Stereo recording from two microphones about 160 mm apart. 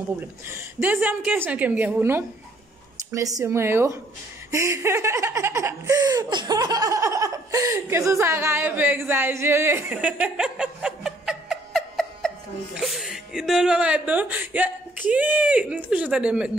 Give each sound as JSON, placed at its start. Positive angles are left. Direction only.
{"t": 0.5, "sound": "laughter", "side_deg": -15}
{"t": 3.1, "sound": "speech", "side_deg": -20}
{"t": 4.5, "sound": "laughter", "side_deg": -20}